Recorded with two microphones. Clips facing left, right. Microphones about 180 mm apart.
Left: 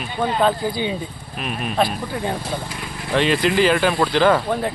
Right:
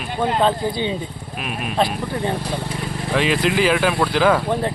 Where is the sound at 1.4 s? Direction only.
5° right (ahead or behind).